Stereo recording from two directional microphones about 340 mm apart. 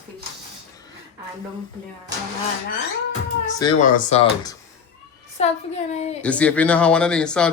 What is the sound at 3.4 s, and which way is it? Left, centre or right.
Speech, centre.